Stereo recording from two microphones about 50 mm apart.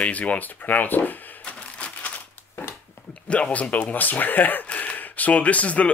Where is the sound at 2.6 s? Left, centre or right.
Left.